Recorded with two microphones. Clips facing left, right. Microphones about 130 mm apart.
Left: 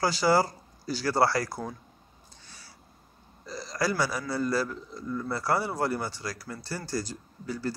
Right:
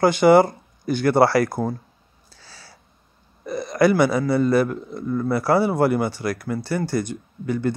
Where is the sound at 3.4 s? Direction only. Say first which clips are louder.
Right 12 dB; 60° right (ahead or behind).